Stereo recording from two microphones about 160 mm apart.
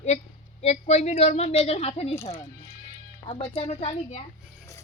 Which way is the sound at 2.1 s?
15° left (ahead or behind).